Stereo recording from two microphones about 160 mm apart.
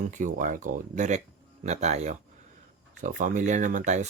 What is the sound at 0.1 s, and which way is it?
Speech, 50° right (ahead or behind).